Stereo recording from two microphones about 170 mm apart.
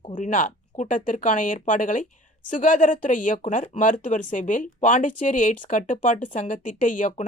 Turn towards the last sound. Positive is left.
turn(degrees=50)  # may be behind; listen again after turning